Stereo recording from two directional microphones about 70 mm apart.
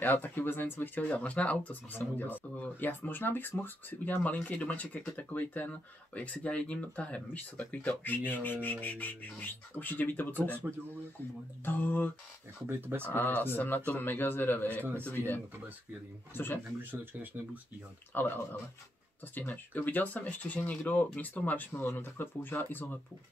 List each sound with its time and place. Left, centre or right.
0.0 s speech: left
11.6 s speech: left
12.6 s speech: right
13.0 s speech: left
16.9 s speech: right
18.1 s speech: left